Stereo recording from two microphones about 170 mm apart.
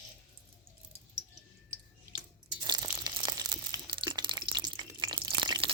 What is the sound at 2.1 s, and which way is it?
Biting, 25° right (ahead or behind).